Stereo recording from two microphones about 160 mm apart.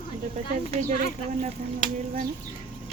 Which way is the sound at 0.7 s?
50° right (ahead or behind).